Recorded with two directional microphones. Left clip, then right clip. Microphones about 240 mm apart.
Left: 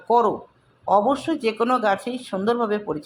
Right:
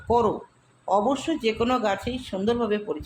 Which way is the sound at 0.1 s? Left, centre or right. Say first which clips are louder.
Left 3 dB; centre.